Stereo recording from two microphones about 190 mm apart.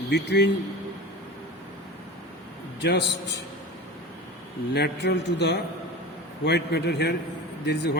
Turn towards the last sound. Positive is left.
turn(degrees=60)  # may be behind; listen again after turning